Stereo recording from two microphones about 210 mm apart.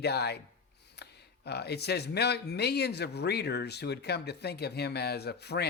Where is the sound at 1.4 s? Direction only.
50° left (ahead or behind).